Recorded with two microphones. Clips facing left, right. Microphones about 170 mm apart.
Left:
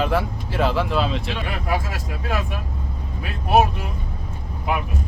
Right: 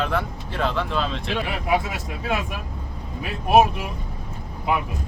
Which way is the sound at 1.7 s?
20° right (ahead or behind).